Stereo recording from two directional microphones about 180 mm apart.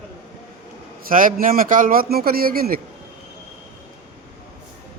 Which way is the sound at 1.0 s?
50° right (ahead or behind).